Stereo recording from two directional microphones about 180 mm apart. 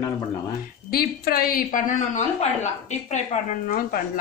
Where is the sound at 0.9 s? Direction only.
55° left (ahead or behind).